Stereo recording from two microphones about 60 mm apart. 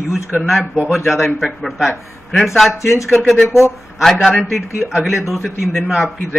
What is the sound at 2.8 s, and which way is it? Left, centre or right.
Speech, left.